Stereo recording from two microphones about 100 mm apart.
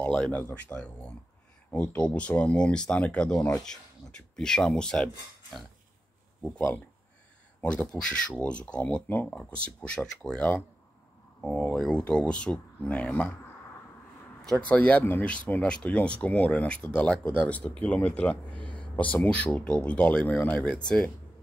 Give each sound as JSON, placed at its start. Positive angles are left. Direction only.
{"t": 0.0, "sound": "speech", "side_deg": 10}
{"t": 6.5, "sound": "speech", "side_deg": 20}
{"t": 14.6, "sound": "speech", "side_deg": 15}